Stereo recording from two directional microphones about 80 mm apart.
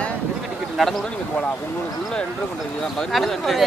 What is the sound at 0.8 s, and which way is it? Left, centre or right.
Speech, centre.